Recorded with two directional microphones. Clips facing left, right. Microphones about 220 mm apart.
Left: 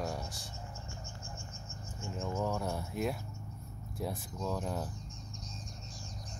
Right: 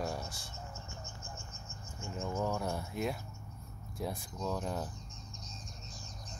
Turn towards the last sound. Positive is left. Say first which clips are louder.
# even
turn(degrees=0)  # may be behind; listen again after turning